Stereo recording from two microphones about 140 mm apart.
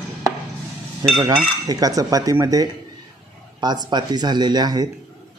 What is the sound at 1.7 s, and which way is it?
Speech, 25° right (ahead or behind).